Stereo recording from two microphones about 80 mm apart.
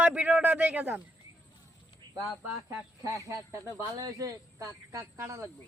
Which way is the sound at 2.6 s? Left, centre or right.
Right.